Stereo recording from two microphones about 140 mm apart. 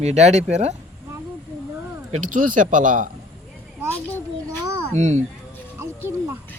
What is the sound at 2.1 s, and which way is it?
Speech, 70° right (ahead or behind).